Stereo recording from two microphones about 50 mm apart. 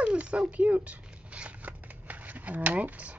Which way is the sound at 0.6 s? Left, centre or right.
Right.